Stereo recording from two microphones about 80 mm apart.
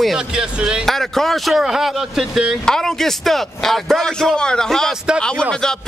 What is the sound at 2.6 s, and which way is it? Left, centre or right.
A man's voice, centre.